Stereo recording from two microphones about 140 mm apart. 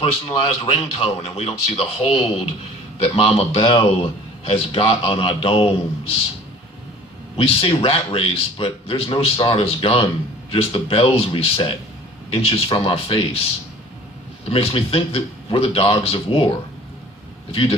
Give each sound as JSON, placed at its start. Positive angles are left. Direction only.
{"t": 0.0, "sound": "a man's voice", "side_deg": 40}
{"t": 7.3, "sound": "a man's voice", "side_deg": 45}
{"t": 14.5, "sound": "speech", "side_deg": 45}
{"t": 17.5, "sound": "speech", "side_deg": 40}